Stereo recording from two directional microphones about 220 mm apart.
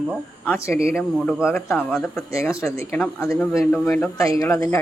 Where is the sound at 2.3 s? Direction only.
15° left (ahead or behind).